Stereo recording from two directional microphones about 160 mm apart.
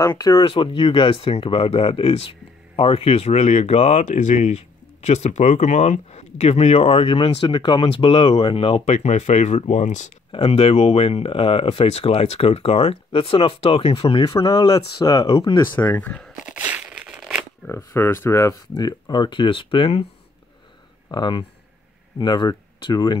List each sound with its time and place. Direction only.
0.0 s speech: 25° left (ahead or behind); by 10.1 s 50° left (ahead or behind)
10.3 s speech: 35° left (ahead or behind); by 16.3 s 10° left (ahead or behind)
16.4 s a sound: 10° right (ahead or behind)
17.6 s speech: 15° left (ahead or behind); by 20.1 s 35° left (ahead or behind)
21.1 s speech: 30° left (ahead or behind)